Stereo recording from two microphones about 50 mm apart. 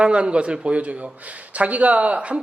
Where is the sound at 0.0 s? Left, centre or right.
Right.